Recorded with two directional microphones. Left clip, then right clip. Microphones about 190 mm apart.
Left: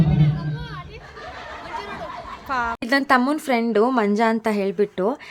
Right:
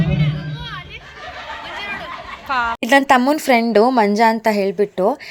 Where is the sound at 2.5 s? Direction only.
15° left (ahead or behind).